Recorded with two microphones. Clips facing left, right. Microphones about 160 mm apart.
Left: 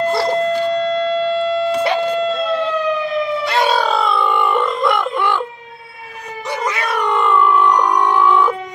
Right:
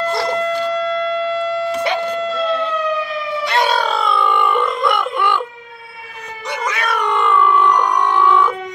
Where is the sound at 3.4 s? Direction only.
5° left (ahead or behind).